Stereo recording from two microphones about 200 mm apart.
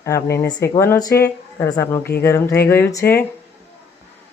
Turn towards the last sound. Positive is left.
turn(degrees=15)  # may be behind; listen again after turning